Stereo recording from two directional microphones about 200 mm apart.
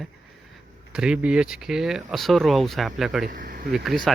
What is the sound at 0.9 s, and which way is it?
Speech, 5° right (ahead or behind).